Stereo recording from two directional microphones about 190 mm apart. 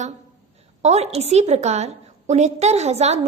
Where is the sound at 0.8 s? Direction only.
35° right (ahead or behind).